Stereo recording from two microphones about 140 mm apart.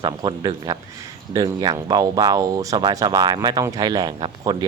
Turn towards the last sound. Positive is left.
turn(degrees=-30)  # may be behind; listen again after turning